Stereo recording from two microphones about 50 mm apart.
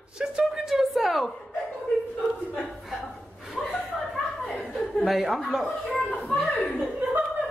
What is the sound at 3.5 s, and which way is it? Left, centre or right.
Chuckle, centre.